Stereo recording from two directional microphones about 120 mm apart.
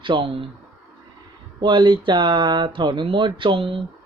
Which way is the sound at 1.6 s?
40° right (ahead or behind).